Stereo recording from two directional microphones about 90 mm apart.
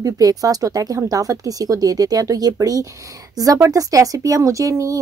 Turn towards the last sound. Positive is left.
turn(degrees=-35)  # may be behind; listen again after turning